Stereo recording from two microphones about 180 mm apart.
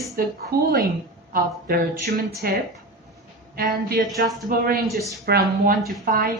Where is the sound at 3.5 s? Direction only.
55° right (ahead or behind).